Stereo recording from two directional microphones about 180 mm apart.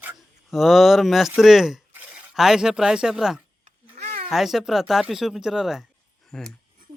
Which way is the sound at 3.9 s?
35° right (ahead or behind).